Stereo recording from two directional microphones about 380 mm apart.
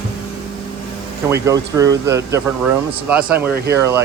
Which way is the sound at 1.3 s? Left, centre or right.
Centre.